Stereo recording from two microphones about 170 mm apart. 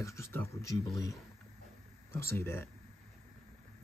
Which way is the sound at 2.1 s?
15° left (ahead or behind).